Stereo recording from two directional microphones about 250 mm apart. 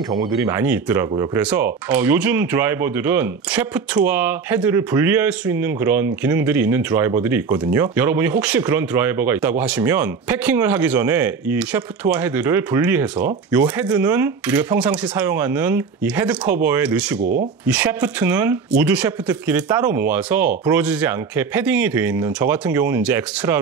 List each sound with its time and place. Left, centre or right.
0.1 s speech: centre
17.2 s speech: right
17.6 s speech: centre